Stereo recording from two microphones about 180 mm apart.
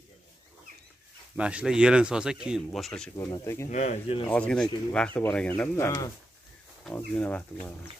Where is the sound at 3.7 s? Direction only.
40° left (ahead or behind).